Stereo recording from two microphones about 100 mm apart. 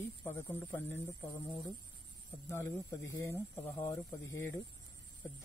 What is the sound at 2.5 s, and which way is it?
Speech, 25° left (ahead or behind).